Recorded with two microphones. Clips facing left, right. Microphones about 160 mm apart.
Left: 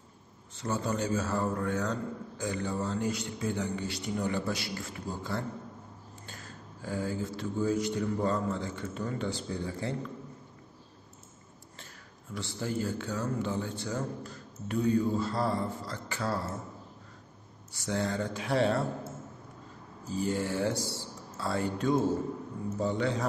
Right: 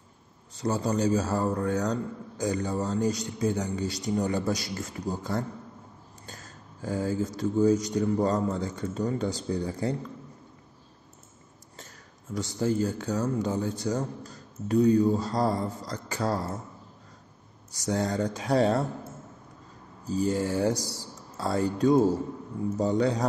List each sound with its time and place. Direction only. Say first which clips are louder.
0.6 s a man's voice: right 5 dB; 35° right (ahead or behind)
12.4 s a man's voice: right 7 dB; 40° right (ahead or behind)
17.7 s a man's voice: right 4 dB; 40° right (ahead or behind)
20.1 s a man's voice: right 4 dB; 40° right (ahead or behind)